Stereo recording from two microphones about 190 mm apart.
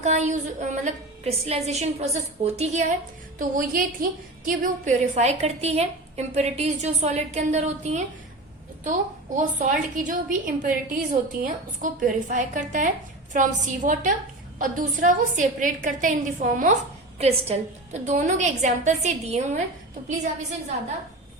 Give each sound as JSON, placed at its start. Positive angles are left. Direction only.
{"t": 0.0, "sound": "a woman's voice", "side_deg": -35}
{"t": 3.3, "sound": "a woman's voice", "side_deg": -45}